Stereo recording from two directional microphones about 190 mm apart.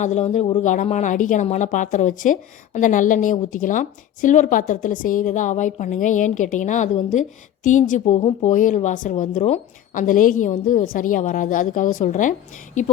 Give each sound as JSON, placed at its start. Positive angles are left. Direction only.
{"t": 0.0, "sound": "a woman's voice", "side_deg": 40}